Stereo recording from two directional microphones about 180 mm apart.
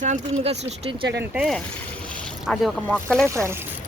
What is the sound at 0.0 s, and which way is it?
Speech, 40° right (ahead or behind).